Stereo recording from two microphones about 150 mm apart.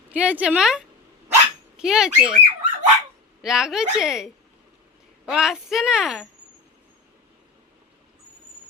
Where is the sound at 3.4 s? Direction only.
5° right (ahead or behind).